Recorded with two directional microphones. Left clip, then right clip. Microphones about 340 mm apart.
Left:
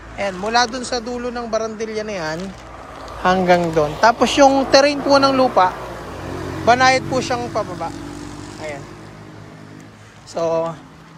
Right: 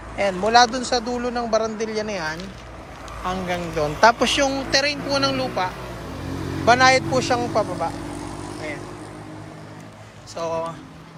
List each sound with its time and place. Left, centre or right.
0.2 s a man's voice: centre
4.4 s speech: left
5.1 s a man's voice: centre
10.3 s speech: left